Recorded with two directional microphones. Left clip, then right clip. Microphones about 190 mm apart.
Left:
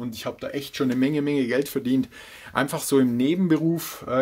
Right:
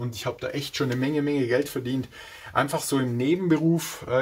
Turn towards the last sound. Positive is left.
turn(degrees=40)  # may be behind; listen again after turning